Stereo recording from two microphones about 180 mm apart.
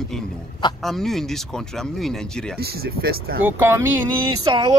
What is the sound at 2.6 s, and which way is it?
Speech, 60° right (ahead or behind).